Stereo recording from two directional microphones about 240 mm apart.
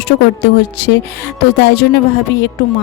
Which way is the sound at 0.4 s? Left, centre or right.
Left.